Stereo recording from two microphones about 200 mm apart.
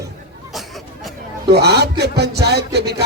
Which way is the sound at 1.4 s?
55° right (ahead or behind).